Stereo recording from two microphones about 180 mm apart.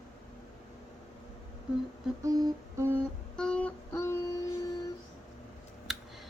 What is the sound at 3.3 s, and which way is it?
Child singing, 5° left (ahead or behind).